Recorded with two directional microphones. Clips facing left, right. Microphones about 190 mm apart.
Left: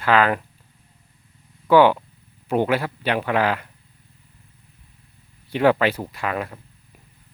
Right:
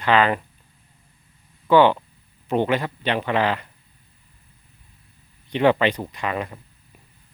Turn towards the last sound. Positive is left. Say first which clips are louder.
# even
turn(degrees=5)  # may be behind; listen again after turning